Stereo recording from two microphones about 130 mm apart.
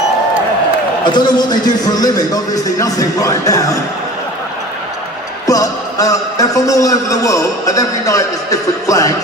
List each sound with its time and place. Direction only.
1.0 s a man's voice: 35° left (ahead or behind)
5.5 s a man's voice: 25° left (ahead or behind)